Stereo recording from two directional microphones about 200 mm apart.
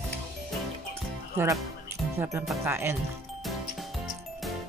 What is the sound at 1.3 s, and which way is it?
Speech, 15° right (ahead or behind).